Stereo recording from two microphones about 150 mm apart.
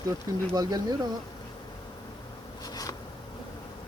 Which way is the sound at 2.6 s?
25° left (ahead or behind).